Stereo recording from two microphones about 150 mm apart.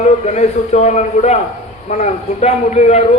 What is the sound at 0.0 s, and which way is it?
A man's voice, 50° left (ahead or behind).